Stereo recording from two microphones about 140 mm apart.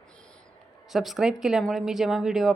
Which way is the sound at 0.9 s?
Centre (ahead or behind).